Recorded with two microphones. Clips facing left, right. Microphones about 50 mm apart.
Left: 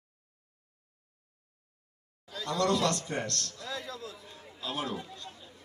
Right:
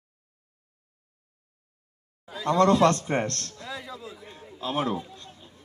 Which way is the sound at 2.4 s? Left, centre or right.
Right.